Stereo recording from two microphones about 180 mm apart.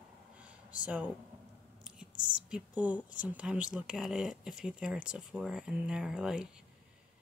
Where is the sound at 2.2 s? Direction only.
5° right (ahead or behind).